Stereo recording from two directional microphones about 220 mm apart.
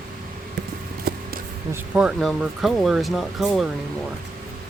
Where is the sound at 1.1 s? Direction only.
45° right (ahead or behind).